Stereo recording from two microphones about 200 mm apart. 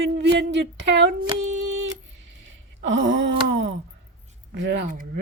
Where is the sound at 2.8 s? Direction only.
65° right (ahead or behind).